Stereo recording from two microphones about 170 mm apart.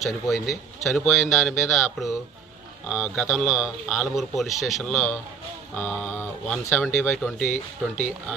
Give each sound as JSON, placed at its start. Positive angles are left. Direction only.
{"t": 0.0, "sound": "a man's voice", "side_deg": 0}
{"t": 7.3, "sound": "speech", "side_deg": 45}